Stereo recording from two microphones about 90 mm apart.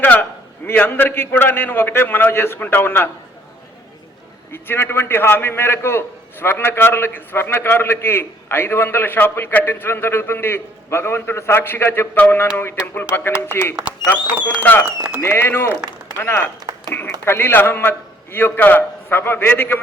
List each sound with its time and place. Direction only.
0.0 s a man's voice: 20° left (ahead or behind)
4.5 s a man's voice: 25° left (ahead or behind)